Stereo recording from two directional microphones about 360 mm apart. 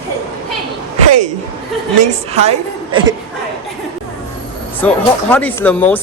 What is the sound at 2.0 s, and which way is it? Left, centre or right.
A woman's voice, centre.